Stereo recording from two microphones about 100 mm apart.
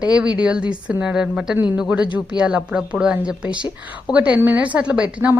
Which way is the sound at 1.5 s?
20° right (ahead or behind).